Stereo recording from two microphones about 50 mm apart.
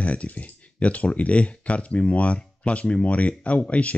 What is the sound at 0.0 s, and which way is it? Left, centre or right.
Speech, left.